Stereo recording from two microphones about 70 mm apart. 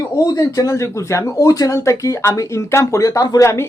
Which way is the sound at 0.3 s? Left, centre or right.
Left.